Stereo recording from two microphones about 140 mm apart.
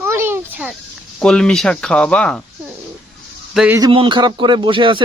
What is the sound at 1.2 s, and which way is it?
Speech, 5° left (ahead or behind).